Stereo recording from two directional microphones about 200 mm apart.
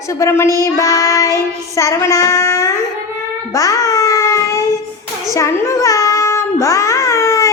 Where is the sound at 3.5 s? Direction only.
15° left (ahead or behind).